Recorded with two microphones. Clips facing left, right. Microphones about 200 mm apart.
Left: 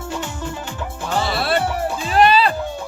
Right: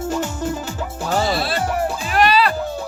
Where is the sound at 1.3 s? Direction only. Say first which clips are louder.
Left 2 dB; 60° left (ahead or behind).